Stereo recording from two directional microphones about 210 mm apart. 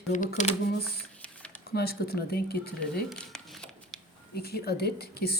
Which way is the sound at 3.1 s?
Centre (ahead or behind).